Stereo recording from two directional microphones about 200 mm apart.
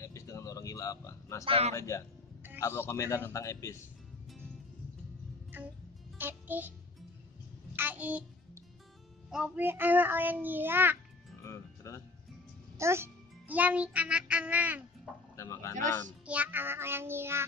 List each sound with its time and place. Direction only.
0.0 s a sound: 15° left (ahead or behind)
1.4 s a man's voice: 25° right (ahead or behind)
1.7 s a man's voice: 15° left (ahead or behind)
6.1 s music: 10° right (ahead or behind)
7.7 s a sound: 10° right (ahead or behind)
9.3 s a child's voice: 5° right (ahead or behind)
11.4 s music: 15° left (ahead or behind)
12.7 s a child's voice: 15° right (ahead or behind)
15.3 s speech: 15° left (ahead or behind)
16.3 s a child's voice: 10° right (ahead or behind)